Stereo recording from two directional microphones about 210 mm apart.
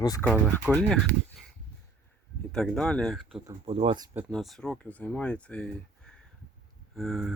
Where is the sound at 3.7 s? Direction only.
25° right (ahead or behind).